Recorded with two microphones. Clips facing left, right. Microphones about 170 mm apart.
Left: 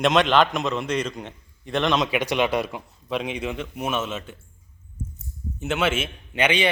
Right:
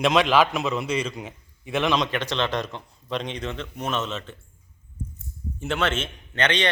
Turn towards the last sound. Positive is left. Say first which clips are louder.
# left 2 dB
turn(degrees=10)  # may be behind; listen again after turning